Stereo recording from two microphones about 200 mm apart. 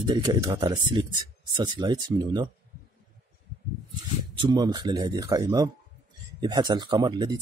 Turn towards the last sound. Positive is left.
turn(degrees=-20)  # may be behind; listen again after turning